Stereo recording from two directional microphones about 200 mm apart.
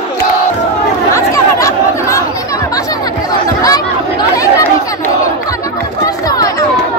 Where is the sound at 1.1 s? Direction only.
15° left (ahead or behind).